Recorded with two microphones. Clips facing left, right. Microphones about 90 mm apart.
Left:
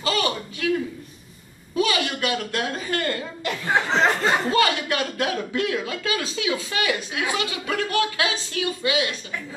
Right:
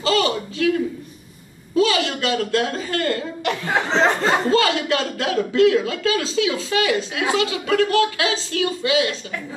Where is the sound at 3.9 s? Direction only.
Centre (ahead or behind).